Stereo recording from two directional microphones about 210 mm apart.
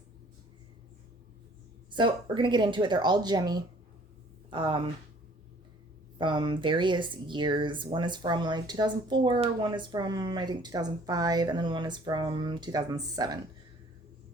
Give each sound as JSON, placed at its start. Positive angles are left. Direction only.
{"t": 1.9, "sound": "speech", "side_deg": -25}
{"t": 6.1, "sound": "speech", "side_deg": -20}